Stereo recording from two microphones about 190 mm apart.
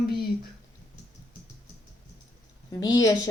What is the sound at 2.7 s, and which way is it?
Speech, 20° left (ahead or behind).